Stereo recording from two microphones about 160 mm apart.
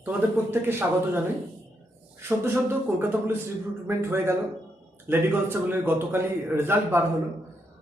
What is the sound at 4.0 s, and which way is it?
A man's voice, 15° right (ahead or behind).